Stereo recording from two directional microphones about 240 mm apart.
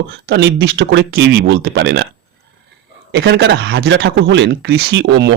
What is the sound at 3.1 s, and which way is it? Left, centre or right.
Speech, right.